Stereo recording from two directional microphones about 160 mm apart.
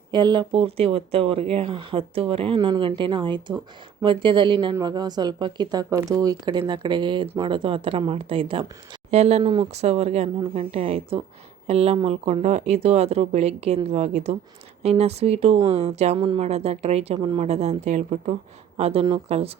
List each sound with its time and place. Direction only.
0.1 s speech: 25° right (ahead or behind); by 9.4 s 45° right (ahead or behind)
9.4 s speech: 30° right (ahead or behind)
16.1 s speech: 30° right (ahead or behind)
17.2 s speech: 30° right (ahead or behind)
17.4 s speech: 45° right (ahead or behind)